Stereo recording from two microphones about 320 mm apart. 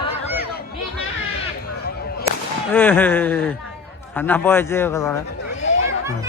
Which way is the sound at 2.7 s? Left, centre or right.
Centre.